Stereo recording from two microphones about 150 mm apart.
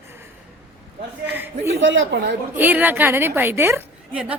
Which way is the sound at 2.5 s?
10° right (ahead or behind).